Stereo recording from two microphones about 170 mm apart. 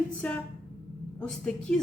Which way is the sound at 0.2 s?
10° left (ahead or behind).